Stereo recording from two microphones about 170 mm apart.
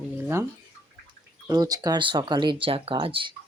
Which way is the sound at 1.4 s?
20° right (ahead or behind).